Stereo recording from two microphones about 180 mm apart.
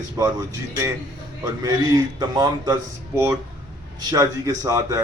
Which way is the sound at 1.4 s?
20° right (ahead or behind).